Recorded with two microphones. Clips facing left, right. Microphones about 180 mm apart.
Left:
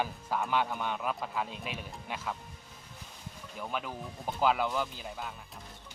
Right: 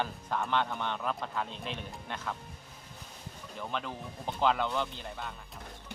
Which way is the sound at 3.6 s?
5° left (ahead or behind).